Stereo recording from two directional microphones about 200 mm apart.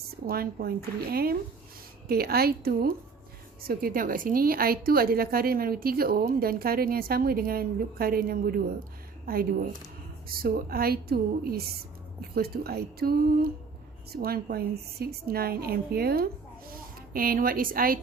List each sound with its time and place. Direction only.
0.3 s a woman's voice: 50° right (ahead or behind)